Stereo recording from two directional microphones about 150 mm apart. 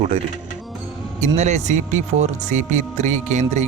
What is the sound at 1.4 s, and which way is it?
Speech, 50° right (ahead or behind).